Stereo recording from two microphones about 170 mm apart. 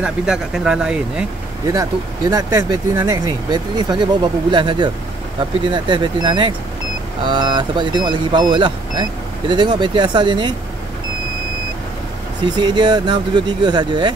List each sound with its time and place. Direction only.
0.0 s speech: 5° right (ahead or behind)
1.7 s speech: 20° right (ahead or behind)
12.4 s speech: 25° right (ahead or behind)